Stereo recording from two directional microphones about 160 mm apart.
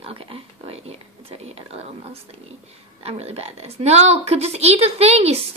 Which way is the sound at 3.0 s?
40° right (ahead or behind).